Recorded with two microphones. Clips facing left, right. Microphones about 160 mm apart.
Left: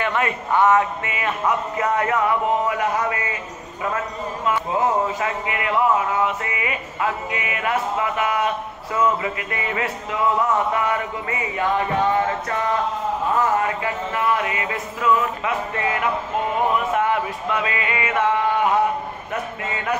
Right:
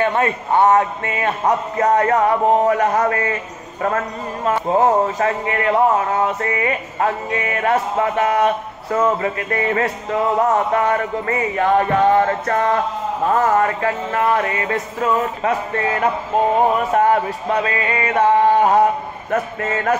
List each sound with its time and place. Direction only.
0.1 s speech: 30° right (ahead or behind)
4.5 s speech: 45° right (ahead or behind)